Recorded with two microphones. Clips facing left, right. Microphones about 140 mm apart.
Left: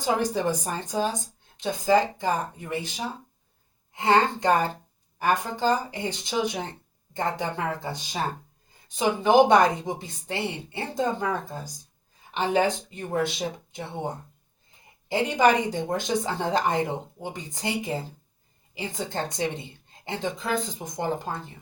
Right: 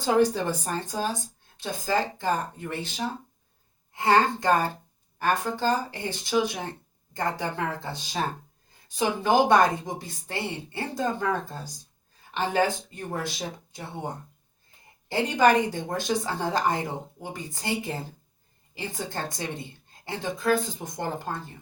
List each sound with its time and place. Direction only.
0.0 s speech: 15° left (ahead or behind)
3.9 s speech: 20° left (ahead or behind)
15.1 s speech: 15° left (ahead or behind)